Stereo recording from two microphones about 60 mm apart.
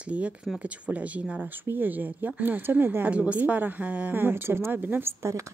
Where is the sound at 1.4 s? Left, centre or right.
Right.